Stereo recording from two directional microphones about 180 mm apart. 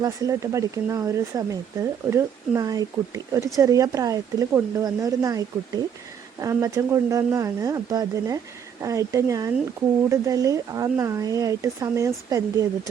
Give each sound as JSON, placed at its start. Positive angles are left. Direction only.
{"t": 0.0, "sound": "speech", "side_deg": -20}